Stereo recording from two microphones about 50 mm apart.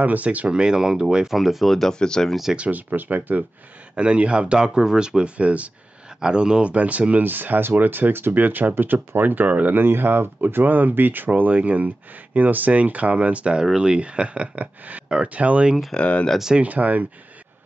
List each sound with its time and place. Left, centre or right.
0.0 s speech: right
0.5 s speech: centre
2.0 s speech: centre
2.5 s speech: right
2.9 s speech: right
3.9 s speech: right
6.7 s speech: right
9.8 s speech: right
16.0 s speech: left
16.5 s speech: right